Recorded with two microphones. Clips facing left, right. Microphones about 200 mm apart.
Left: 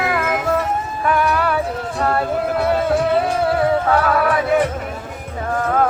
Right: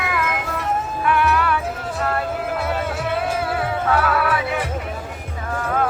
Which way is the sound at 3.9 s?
40° left (ahead or behind).